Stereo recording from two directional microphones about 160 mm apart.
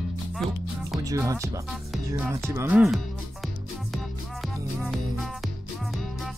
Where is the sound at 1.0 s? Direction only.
20° right (ahead or behind).